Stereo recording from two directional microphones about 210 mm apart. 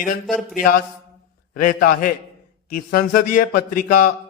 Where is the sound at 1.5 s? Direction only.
40° left (ahead or behind).